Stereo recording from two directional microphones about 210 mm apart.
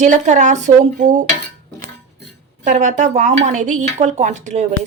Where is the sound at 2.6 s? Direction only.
35° right (ahead or behind).